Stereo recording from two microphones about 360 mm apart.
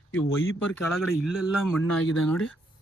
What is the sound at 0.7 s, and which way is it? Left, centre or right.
Speech, centre.